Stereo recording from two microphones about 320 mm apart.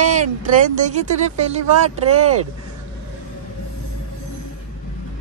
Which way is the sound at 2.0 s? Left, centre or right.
Right.